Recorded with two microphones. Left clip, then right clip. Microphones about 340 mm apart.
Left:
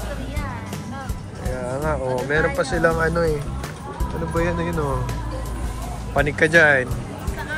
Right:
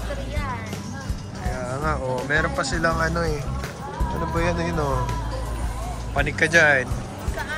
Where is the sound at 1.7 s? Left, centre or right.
Centre.